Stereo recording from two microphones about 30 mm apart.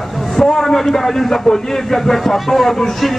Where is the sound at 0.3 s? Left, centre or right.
Centre.